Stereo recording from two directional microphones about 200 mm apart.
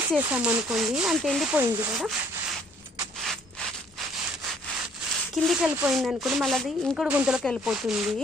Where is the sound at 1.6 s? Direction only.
20° right (ahead or behind).